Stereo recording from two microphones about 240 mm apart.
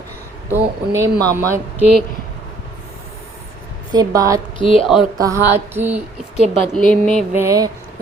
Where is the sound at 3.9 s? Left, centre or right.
Centre.